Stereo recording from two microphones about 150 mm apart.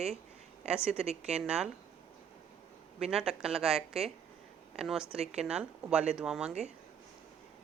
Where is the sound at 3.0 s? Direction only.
5° right (ahead or behind).